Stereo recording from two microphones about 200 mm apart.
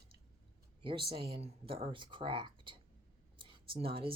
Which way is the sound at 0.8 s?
25° right (ahead or behind).